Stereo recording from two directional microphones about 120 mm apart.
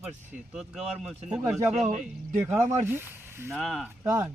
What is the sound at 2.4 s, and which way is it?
Speech, 20° right (ahead or behind).